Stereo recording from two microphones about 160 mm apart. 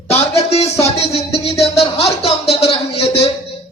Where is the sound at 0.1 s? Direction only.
40° left (ahead or behind).